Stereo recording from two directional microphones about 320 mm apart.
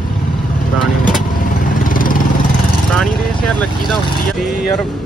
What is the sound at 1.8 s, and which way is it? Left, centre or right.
Vehicle, left.